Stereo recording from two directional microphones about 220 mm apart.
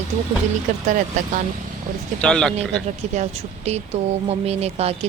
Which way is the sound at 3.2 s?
30° right (ahead or behind).